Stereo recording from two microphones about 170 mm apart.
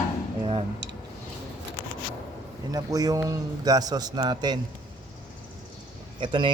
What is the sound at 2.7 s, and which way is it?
Speech, 20° right (ahead or behind).